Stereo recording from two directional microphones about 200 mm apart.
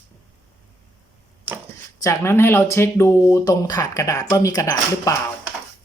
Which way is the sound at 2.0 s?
15° left (ahead or behind).